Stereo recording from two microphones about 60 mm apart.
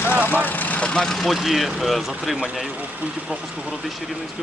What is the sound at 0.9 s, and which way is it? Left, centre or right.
Speech, centre.